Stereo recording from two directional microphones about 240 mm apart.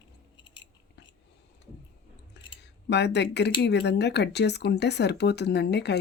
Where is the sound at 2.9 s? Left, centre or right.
Left.